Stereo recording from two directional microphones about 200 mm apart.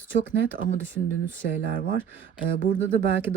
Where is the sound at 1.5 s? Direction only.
55° right (ahead or behind).